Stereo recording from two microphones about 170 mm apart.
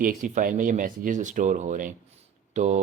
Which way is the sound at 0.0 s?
50° right (ahead or behind).